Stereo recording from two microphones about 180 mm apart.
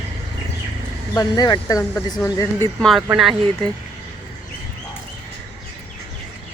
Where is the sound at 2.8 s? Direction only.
Centre (ahead or behind).